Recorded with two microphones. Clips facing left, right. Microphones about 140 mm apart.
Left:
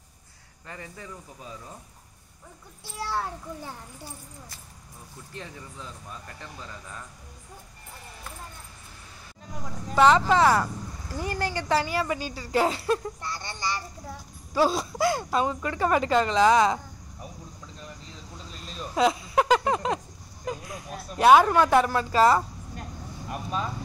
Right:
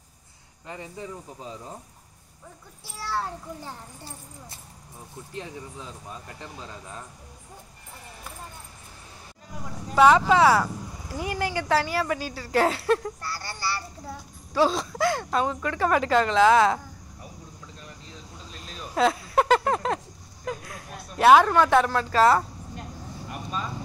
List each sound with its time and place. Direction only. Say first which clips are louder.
0.7 s speech: right 4 dB; 20° right (ahead or behind)
5.3 s speech: right 4 dB; 20° right (ahead or behind)
9.9 s a woman's voice: right 2 dB; 5° right (ahead or behind)
13.2 s speech: even; 20° left (ahead or behind)
14.0 s a woman's voice: right 2 dB; 5° left (ahead or behind)
18.9 s a sound: right 1 dB; centre (ahead or behind)
20.4 s speech: even; 5° left (ahead or behind)